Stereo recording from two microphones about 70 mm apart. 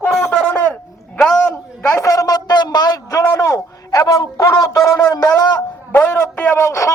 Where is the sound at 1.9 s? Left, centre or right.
Left.